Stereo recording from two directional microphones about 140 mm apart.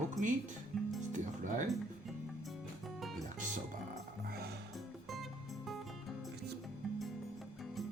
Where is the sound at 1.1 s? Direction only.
65° right (ahead or behind).